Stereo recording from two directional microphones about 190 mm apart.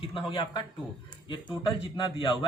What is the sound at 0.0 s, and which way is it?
A man's voice, 30° left (ahead or behind).